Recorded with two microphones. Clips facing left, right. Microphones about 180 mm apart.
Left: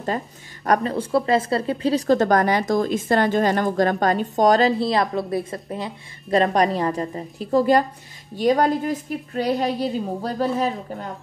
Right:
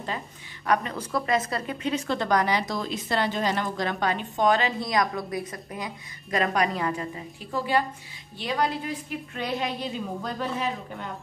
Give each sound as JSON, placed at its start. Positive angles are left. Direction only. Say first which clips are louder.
{"t": 0.7, "sound": "speech", "louder": "left 5 dB", "side_deg": 30}